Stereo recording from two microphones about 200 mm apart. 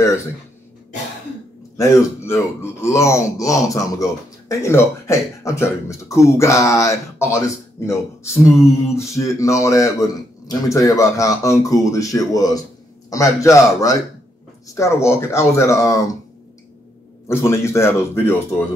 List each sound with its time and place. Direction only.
1.8 s speech: 15° left (ahead or behind)
17.3 s speech: 15° left (ahead or behind)